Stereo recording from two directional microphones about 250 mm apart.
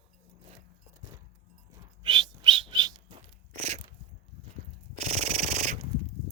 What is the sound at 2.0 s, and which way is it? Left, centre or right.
Bird, centre.